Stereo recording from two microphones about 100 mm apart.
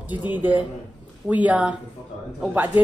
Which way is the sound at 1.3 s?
15° right (ahead or behind).